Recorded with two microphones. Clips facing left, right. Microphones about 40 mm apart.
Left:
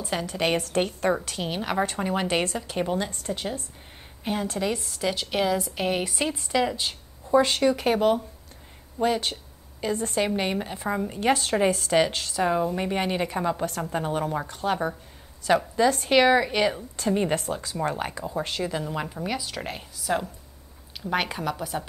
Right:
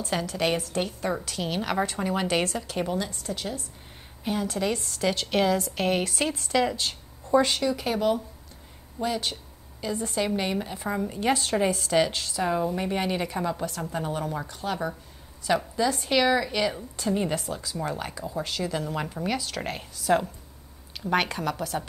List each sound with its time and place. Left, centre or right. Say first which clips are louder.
0.3 s a woman's voice: left 2 dB; left
0.6 s speech: left 4 dB; left
1.4 s a woman's voice: left 1 dB; centre
3.1 s speech: left 2 dB; left
3.3 s a woman's voice: left 2 dB; left
4.6 s a woman's voice: even; centre
6.8 s a sound: even; centre
7.5 s a woman's voice: left 4 dB; left
10.2 s a woman's voice: left 1 dB; left
11.1 s speech: left 2 dB; left
12.4 s a woman's voice: left 1 dB; centre
13.7 s a woman's voice: left 3 dB; left
18.6 s a woman's voice: left 1 dB; centre